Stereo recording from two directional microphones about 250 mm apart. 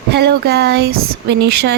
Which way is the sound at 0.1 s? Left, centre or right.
Right.